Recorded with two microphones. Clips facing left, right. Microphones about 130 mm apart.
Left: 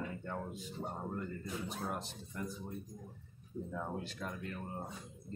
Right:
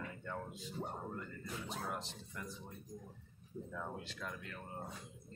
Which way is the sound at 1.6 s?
50° left (ahead or behind).